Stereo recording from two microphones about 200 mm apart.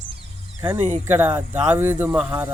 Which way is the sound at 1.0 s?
10° right (ahead or behind).